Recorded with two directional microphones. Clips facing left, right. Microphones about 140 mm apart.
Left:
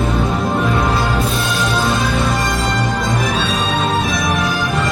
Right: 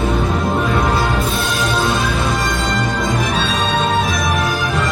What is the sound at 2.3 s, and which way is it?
Music, centre (ahead or behind).